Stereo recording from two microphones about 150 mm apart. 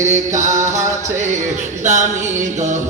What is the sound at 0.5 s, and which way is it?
Music, 20° right (ahead or behind).